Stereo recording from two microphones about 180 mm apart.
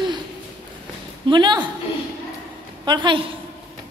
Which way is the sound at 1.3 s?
25° right (ahead or behind).